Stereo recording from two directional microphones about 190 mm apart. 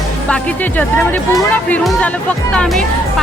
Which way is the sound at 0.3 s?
5° left (ahead or behind).